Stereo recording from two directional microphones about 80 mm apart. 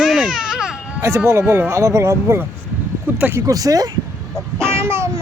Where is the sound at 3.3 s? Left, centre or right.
Right.